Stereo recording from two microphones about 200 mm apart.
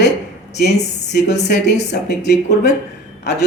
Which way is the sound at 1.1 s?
55° left (ahead or behind).